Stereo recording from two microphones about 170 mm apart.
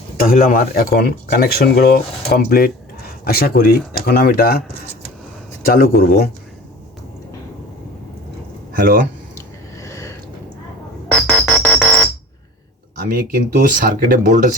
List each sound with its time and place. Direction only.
0.2 s speech: 55° left (ahead or behind)
5.6 s speech: 60° left (ahead or behind)
8.8 s speech: 55° right (ahead or behind)
9.3 s a sound: 20° left (ahead or behind)
11.1 s music: 5° left (ahead or behind)
13.1 s speech: 55° right (ahead or behind)